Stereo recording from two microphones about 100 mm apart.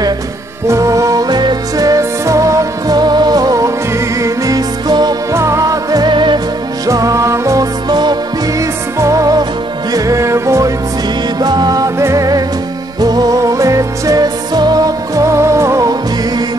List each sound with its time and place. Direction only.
0.7 s music: 30° right (ahead or behind)
5.3 s music: 30° right (ahead or behind); by 6.4 s 50° right (ahead or behind)
6.9 s music: 35° right (ahead or behind)
7.9 s music: 45° right (ahead or behind)
11.3 s music: 45° right (ahead or behind)